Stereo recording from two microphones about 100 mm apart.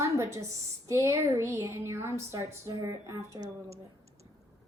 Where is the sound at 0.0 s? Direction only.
30° right (ahead or behind).